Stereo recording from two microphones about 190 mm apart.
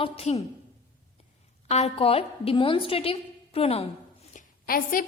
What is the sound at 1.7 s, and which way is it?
A woman's voice, 35° left (ahead or behind).